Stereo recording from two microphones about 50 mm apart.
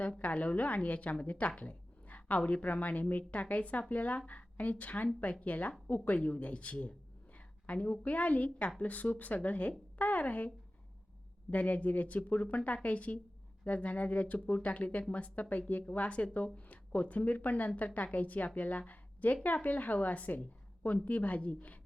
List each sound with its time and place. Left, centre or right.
0.2 s a woman's voice: left
11.5 s speech: left